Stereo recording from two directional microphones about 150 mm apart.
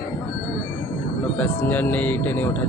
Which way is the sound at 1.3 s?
10° left (ahead or behind).